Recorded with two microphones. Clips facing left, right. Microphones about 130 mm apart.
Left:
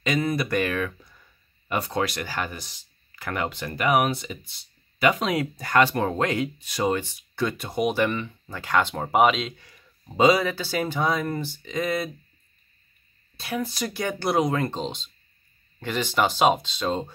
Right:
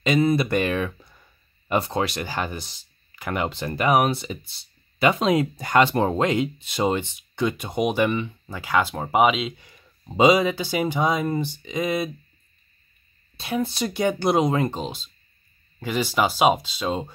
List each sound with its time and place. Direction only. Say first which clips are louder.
0.0 s speech: right 5 dB; 25° right (ahead or behind)
3.2 s speech: right 2 dB; 15° right (ahead or behind)
3.4 s speech: right 2 dB; 30° right (ahead or behind); by 9.5 s 5° right (ahead or behind)
9.6 s speech: right 1 dB; 20° right (ahead or behind)
13.4 s speech: right 3 dB; 25° right (ahead or behind); by 17.1 s 10° right (ahead or behind)